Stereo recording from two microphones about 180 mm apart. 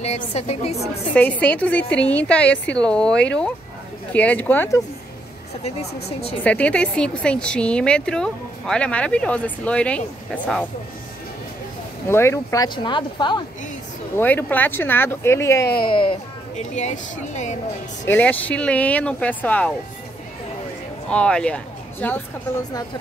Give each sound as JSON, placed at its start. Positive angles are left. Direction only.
{"t": 0.0, "sound": "speech", "side_deg": 35}
{"t": 1.1, "sound": "a woman's voice", "side_deg": 10}
{"t": 6.0, "sound": "speech", "side_deg": 35}
{"t": 6.4, "sound": "a woman's voice", "side_deg": 5}
{"t": 12.1, "sound": "a woman's voice", "side_deg": 15}
{"t": 12.6, "sound": "speech", "side_deg": 25}
{"t": 14.1, "sound": "a woman's voice", "side_deg": 10}
{"t": 15.8, "sound": "speech", "side_deg": 30}
{"t": 16.5, "sound": "speech", "side_deg": 40}
{"t": 18.0, "sound": "a woman's voice", "side_deg": 10}
{"t": 21.1, "sound": "a woman's voice", "side_deg": 5}